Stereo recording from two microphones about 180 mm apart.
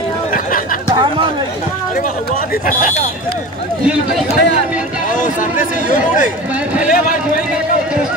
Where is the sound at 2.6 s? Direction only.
50° left (ahead or behind).